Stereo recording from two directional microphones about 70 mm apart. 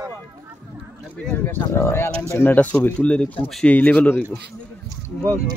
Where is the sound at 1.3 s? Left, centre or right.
Left.